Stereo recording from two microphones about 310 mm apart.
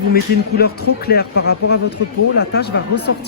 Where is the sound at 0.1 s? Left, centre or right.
Left.